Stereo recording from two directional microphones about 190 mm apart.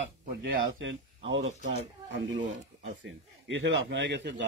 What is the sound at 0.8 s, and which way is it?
Speech, 75° right (ahead or behind).